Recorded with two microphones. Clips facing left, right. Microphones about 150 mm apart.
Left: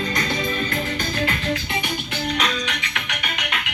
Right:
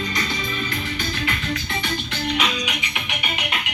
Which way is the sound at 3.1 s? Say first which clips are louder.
Right 2 dB; 25° right (ahead or behind).